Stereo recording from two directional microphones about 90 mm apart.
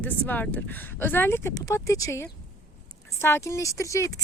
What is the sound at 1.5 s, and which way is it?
Speech, 40° left (ahead or behind).